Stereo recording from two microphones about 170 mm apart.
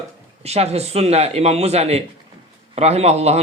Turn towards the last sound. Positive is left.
turn(degrees=-40)  # may be behind; listen again after turning